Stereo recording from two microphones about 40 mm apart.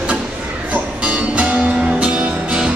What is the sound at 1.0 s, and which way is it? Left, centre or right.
Music, right.